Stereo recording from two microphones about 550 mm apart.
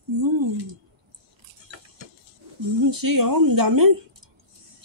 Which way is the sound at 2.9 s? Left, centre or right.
Right.